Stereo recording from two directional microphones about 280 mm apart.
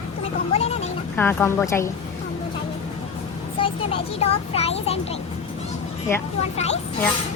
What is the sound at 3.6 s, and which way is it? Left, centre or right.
A child's voice, centre.